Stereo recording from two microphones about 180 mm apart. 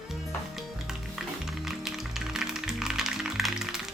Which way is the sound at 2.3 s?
5° right (ahead or behind).